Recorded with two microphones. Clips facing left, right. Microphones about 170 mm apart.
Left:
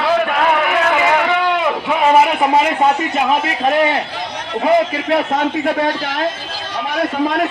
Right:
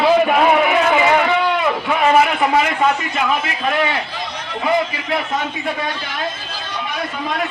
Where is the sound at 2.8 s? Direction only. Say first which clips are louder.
Left 3 dB; 35° left (ahead or behind).